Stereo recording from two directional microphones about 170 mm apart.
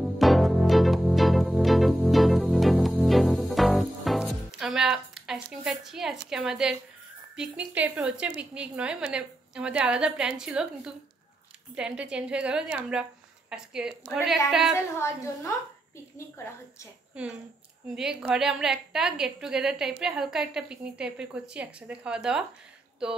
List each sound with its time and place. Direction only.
0.0 s music: centre (ahead or behind)
7.3 s a woman's voice: 5° right (ahead or behind)
15.0 s a woman's voice: 15° left (ahead or behind)
17.1 s a woman's voice: 5° right (ahead or behind)